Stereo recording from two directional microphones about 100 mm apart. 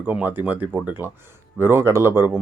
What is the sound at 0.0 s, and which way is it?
Speech, 15° right (ahead or behind).